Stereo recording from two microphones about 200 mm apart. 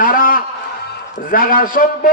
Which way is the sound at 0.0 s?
45° left (ahead or behind).